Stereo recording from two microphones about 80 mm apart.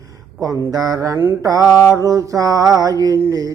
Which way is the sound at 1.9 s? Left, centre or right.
Right.